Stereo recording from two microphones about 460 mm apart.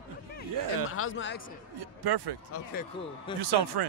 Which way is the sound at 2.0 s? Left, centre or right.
Right.